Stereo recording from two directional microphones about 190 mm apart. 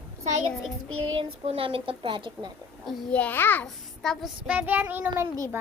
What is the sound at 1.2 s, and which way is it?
A woman's voice, 30° right (ahead or behind).